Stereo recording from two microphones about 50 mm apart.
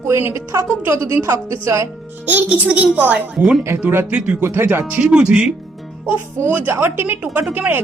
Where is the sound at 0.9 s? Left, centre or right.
Right.